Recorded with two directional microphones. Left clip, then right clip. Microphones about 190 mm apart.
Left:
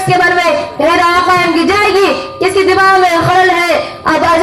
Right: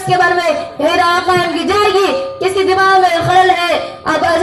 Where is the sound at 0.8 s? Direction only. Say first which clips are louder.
Left 3 dB; 45° right (ahead or behind).